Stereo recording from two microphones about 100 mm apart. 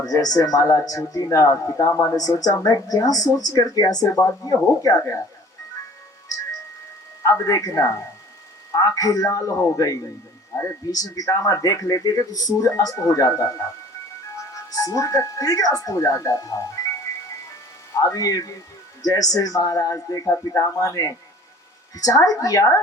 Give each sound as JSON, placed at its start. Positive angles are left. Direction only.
{"t": 0.0, "sound": "speech", "side_deg": 40}
{"t": 7.4, "sound": "speech", "side_deg": 35}
{"t": 10.5, "sound": "a sound", "side_deg": 30}
{"t": 10.9, "sound": "speech", "side_deg": 40}
{"t": 18.0, "sound": "speech", "side_deg": 35}